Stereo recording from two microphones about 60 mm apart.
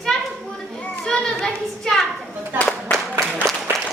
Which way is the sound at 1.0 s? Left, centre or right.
Centre.